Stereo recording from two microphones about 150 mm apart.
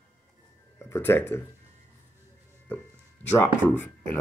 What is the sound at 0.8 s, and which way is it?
Speech, 15° left (ahead or behind).